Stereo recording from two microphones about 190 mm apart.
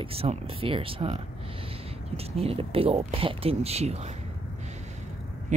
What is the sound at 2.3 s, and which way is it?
Speech, 30° right (ahead or behind).